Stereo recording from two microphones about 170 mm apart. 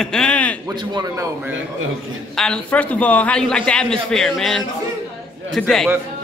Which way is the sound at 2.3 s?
5° left (ahead or behind).